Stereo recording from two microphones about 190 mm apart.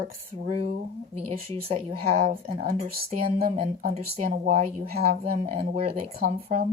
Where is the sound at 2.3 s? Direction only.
50° right (ahead or behind).